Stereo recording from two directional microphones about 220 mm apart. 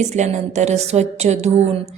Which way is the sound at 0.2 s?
30° right (ahead or behind).